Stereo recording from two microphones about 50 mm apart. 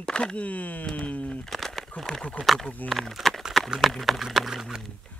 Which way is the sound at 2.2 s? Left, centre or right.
Centre.